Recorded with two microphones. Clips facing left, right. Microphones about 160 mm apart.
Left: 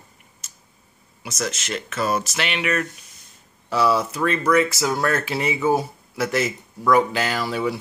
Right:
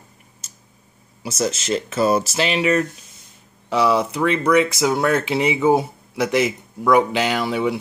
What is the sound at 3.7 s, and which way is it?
Speech, 15° right (ahead or behind).